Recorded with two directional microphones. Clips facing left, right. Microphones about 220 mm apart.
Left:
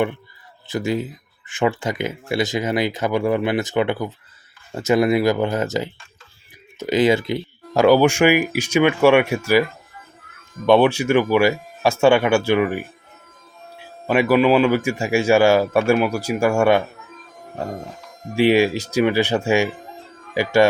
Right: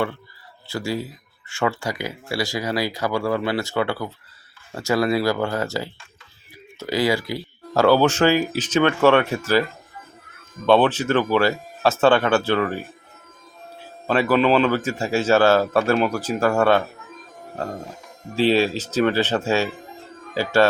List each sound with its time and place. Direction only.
0.7 s a man's voice: 20° left (ahead or behind)
10.7 s a man's voice: 10° left (ahead or behind)
14.1 s a man's voice: 10° left (ahead or behind)
18.3 s a man's voice: 15° left (ahead or behind)